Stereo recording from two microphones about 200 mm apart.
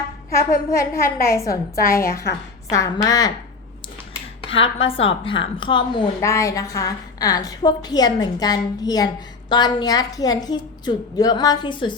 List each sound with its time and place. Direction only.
0.3 s a woman's voice: 15° left (ahead or behind)
1.7 s a woman's voice: 45° left (ahead or behind)
2.6 s a woman's voice: 15° left (ahead or behind)
4.4 s a woman's voice: 25° left (ahead or behind)